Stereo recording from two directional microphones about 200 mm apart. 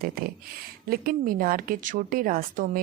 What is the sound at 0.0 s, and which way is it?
A woman's voice, 50° right (ahead or behind).